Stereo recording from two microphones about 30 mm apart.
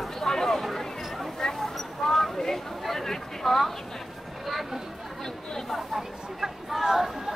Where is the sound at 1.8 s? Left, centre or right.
Centre.